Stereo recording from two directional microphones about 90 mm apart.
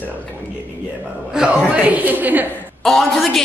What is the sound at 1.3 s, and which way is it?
Speech, 5° right (ahead or behind).